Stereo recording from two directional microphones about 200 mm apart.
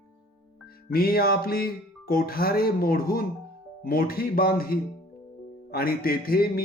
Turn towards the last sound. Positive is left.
turn(degrees=50)  # may be behind; listen again after turning